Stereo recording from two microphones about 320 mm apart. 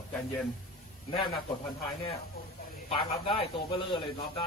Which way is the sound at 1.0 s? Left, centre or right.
Centre.